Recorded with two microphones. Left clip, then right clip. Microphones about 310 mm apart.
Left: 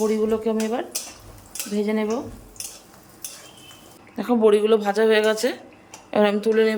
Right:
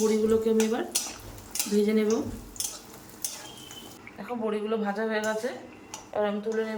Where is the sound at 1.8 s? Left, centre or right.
Centre.